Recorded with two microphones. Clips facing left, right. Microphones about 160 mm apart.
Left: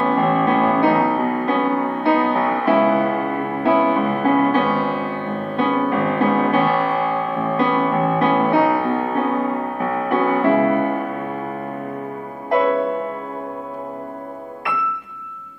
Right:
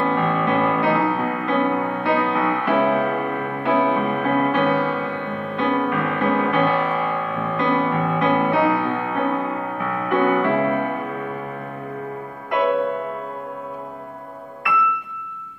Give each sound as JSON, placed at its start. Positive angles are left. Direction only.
{"t": 0.0, "sound": "music", "side_deg": 35}